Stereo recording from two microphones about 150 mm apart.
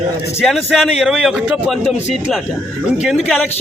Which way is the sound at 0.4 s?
Centre (ahead or behind).